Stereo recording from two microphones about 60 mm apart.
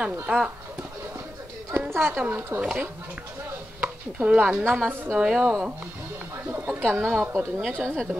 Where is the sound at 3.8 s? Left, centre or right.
Right.